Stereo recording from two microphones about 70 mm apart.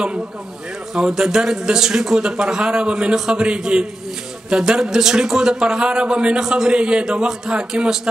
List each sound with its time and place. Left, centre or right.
0.9 s speech: centre